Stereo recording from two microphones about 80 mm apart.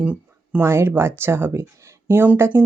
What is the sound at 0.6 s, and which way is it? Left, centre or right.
Speech, right.